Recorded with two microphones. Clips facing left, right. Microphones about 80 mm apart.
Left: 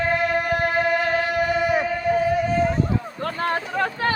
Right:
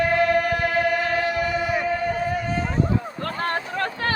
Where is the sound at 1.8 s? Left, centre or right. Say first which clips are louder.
Left 3 dB; centre.